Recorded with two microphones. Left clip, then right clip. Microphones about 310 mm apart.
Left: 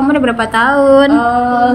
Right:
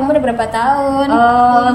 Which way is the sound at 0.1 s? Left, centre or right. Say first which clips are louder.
Left 1 dB; centre.